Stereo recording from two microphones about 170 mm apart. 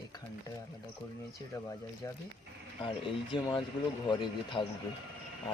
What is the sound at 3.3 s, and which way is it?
Speech, 30° left (ahead or behind).